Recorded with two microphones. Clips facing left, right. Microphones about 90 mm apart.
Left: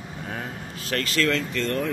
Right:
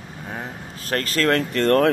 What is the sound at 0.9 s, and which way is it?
Speech, 40° right (ahead or behind).